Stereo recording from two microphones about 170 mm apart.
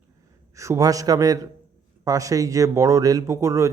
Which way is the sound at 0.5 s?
20° right (ahead or behind).